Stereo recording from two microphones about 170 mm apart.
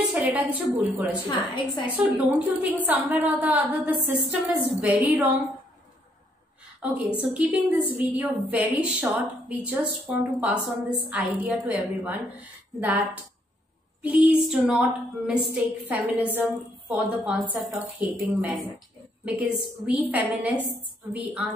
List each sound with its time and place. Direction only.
0.1 s a woman's voice: 10° right (ahead or behind)
1.5 s a woman's voice: 25° left (ahead or behind)
1.9 s a woman's voice: 10° right (ahead or behind)
6.8 s a woman's voice: 5° right (ahead or behind)
14.0 s female singing: 5° right (ahead or behind)
15.5 s a woman's voice: 10° right (ahead or behind)